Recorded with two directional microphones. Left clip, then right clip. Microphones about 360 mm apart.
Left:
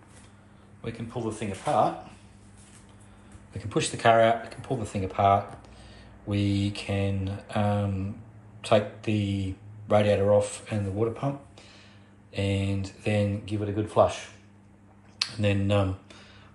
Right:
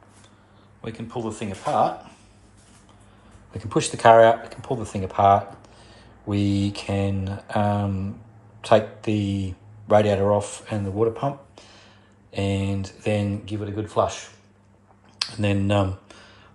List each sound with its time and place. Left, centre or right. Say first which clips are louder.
1.1 s speech: right 3 dB; centre
3.5 s speech: right 4 dB; centre
5.9 s a sound: right 5 dB; centre
8.5 s speech: right 5 dB; centre